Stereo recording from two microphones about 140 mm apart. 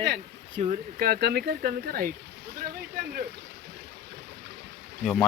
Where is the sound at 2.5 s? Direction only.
90° right.